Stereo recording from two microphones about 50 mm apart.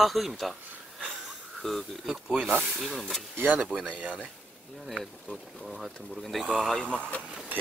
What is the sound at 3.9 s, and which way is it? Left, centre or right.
Speech, right.